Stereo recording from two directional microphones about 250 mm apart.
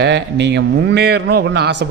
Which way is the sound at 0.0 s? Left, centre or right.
Right.